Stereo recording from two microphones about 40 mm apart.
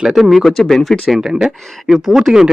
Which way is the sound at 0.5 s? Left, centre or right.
Centre.